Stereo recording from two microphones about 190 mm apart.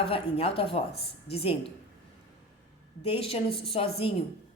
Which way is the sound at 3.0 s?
30° left (ahead or behind).